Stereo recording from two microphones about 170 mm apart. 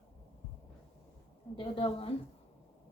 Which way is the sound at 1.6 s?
30° left (ahead or behind).